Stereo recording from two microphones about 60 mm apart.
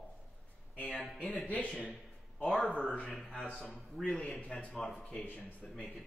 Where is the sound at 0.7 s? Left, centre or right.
Centre.